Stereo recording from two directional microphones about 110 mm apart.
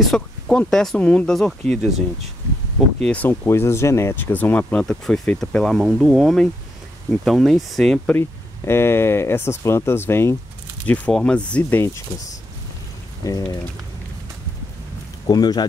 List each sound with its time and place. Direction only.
0.0 s speech: 5° left (ahead or behind)
3.0 s speech: 10° left (ahead or behind)
5.9 s speech: 10° right (ahead or behind)
8.2 s speech: 25° left (ahead or behind)
10.9 s speech: 10° left (ahead or behind)
13.2 s speech: 30° left (ahead or behind)
15.2 s speech: 40° left (ahead or behind)